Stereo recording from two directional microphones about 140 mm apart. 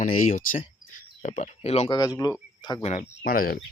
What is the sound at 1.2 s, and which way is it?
Speech, 60° left (ahead or behind).